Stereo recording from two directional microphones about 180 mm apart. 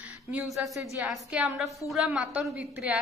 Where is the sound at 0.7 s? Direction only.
15° right (ahead or behind).